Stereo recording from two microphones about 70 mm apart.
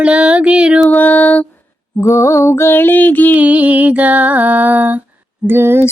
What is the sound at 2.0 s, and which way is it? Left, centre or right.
Mantra, left.